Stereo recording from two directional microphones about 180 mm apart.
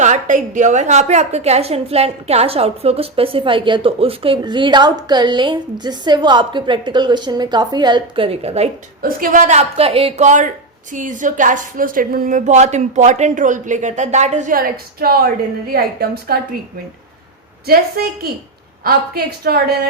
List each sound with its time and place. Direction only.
0.0 s a woman's voice: 45° right (ahead or behind)
9.0 s a woman's voice: 50° right (ahead or behind)
17.7 s a woman's voice: 55° right (ahead or behind)